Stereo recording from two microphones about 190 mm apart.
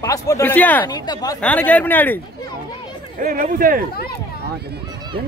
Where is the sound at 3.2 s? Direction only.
50° right (ahead or behind).